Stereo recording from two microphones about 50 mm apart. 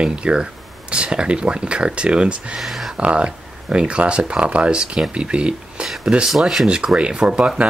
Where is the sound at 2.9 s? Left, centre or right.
Right.